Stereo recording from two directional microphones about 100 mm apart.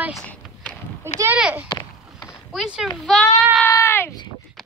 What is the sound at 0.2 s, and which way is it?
Horse, 15° left (ahead or behind).